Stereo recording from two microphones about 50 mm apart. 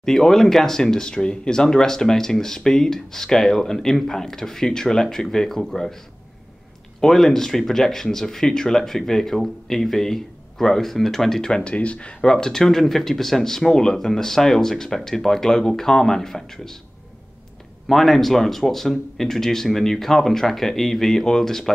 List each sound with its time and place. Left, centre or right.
0.0 s speech: centre
7.0 s speech: centre
17.8 s speech: centre